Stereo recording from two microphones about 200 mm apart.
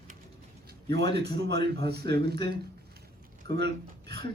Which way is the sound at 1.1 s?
55° right (ahead or behind).